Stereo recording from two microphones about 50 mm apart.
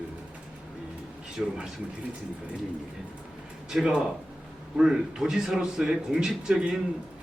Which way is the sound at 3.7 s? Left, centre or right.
Centre.